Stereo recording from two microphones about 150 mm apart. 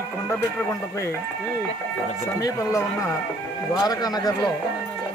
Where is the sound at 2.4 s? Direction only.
20° left (ahead or behind).